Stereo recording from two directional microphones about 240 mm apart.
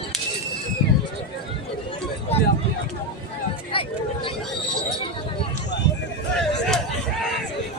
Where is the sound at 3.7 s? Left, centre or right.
Left.